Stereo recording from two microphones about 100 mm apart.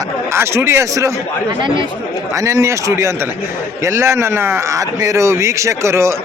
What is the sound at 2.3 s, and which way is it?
A man's voice, 30° right (ahead or behind).